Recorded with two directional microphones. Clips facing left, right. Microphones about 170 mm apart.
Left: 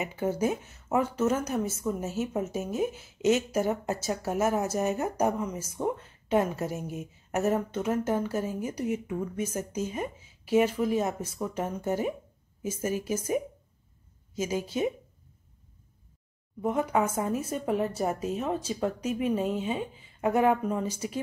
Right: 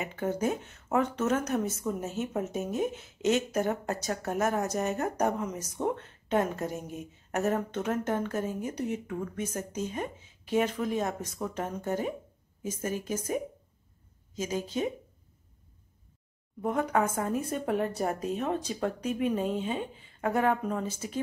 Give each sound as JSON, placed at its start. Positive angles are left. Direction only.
{"t": 0.0, "sound": "a woman's voice", "side_deg": 5}
{"t": 16.6, "sound": "speech", "side_deg": 5}